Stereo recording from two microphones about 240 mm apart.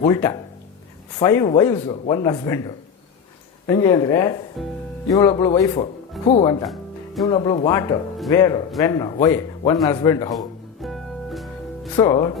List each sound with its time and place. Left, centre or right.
0.0 s a man's voice: centre
4.6 s speech: centre
5.0 s a man's voice: centre
6.7 s music: centre
7.3 s a man's voice: centre
10.3 s music: centre
11.9 s speech: centre